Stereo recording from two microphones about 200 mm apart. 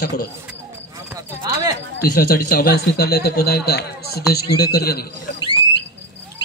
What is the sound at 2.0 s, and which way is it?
Speech, 50° left (ahead or behind).